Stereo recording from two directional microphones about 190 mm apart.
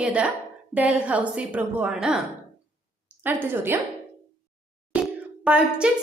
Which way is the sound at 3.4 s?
10° right (ahead or behind).